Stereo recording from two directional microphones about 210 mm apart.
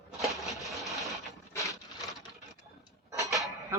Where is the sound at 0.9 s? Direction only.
Centre (ahead or behind).